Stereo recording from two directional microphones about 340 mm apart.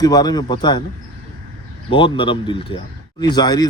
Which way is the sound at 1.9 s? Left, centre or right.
Centre.